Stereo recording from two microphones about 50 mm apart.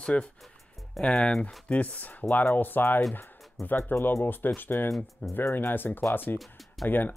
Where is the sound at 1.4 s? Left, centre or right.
Left.